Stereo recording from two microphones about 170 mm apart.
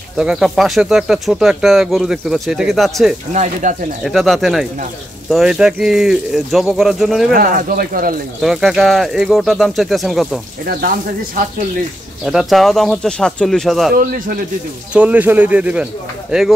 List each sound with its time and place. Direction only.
0.2 s speech: centre (ahead or behind)
3.6 s speech: 50° right (ahead or behind)
4.0 s speech: centre (ahead or behind)
7.3 s speech: 60° right (ahead or behind)
8.4 s speech: centre (ahead or behind)
10.6 s speech: 60° right (ahead or behind)
12.3 s speech: centre (ahead or behind)
13.9 s speech: 55° right (ahead or behind)
14.9 s speech: 10° right (ahead or behind)